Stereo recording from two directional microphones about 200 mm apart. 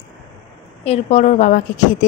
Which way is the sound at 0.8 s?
30° left (ahead or behind).